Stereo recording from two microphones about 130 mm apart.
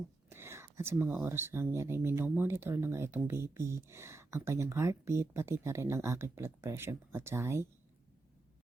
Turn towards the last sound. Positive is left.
turn(degrees=-20)  # may be behind; listen again after turning